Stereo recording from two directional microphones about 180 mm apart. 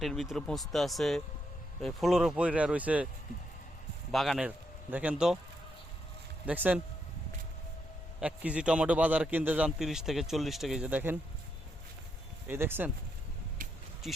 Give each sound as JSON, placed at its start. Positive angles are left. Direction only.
{"t": 0.0, "sound": "a man's voice", "side_deg": 0}
{"t": 4.1, "sound": "speech", "side_deg": 0}
{"t": 6.4, "sound": "speech", "side_deg": -10}
{"t": 8.2, "sound": "a man's voice", "side_deg": -5}
{"t": 12.5, "sound": "speech", "side_deg": -10}
{"t": 13.6, "sound": "a sound", "side_deg": -50}